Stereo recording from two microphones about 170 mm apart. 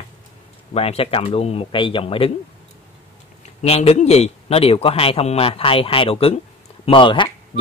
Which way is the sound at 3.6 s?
35° left (ahead or behind).